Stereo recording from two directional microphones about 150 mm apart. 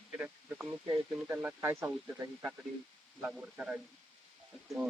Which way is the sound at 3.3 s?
5° right (ahead or behind).